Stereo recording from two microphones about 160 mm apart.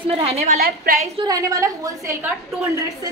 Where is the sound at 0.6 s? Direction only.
75° right (ahead or behind).